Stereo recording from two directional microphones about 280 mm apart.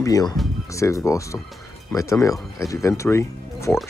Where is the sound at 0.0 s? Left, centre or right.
Centre.